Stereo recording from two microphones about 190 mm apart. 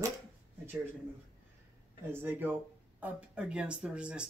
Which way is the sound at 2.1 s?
10° right (ahead or behind).